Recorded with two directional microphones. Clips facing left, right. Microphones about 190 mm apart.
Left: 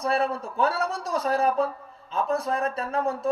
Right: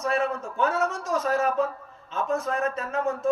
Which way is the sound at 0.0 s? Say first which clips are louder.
Left 1 dB; 35° left (ahead or behind).